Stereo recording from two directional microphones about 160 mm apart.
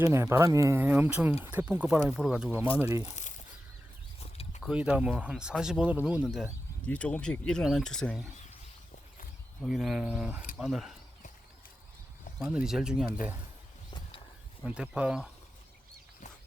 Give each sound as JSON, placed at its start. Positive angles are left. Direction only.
{"t": 0.0, "sound": "speech", "side_deg": -15}
{"t": 3.1, "sound": "a sound", "side_deg": 50}
{"t": 4.6, "sound": "speech", "side_deg": -5}
{"t": 6.8, "sound": "speech", "side_deg": 10}
{"t": 9.6, "sound": "speech", "side_deg": -5}
{"t": 12.4, "sound": "speech", "side_deg": -5}
{"t": 14.6, "sound": "speech", "side_deg": -5}